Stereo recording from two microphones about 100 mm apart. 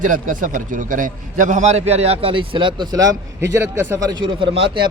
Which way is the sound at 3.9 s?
35° right (ahead or behind).